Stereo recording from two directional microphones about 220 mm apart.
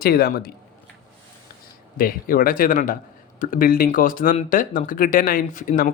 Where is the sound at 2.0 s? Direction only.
40° left (ahead or behind).